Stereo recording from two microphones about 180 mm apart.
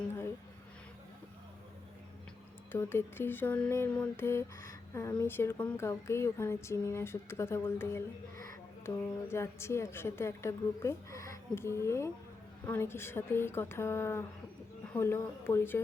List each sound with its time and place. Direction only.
2.7 s a woman's voice: 10° left (ahead or behind)
9.2 s a woman's voice: 15° left (ahead or behind)